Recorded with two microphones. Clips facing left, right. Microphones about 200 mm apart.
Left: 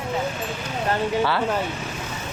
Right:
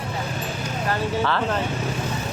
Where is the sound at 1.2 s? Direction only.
10° left (ahead or behind).